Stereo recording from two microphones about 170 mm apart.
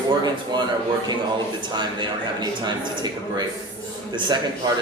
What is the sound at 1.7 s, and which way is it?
Speech, 25° right (ahead or behind).